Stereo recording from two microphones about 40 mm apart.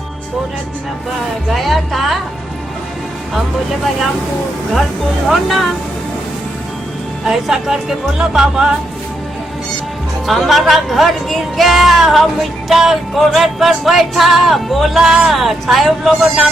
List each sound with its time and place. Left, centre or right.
1.5 s speech: centre
3.3 s speech: centre
5.3 s speech: centre
7.3 s speech: centre
10.2 s speech: centre